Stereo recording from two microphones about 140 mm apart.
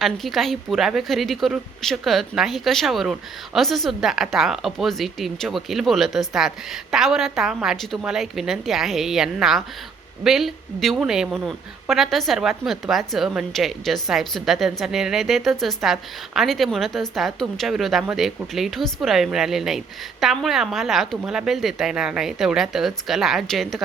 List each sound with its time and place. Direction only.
0.0 s a woman's voice: centre (ahead or behind)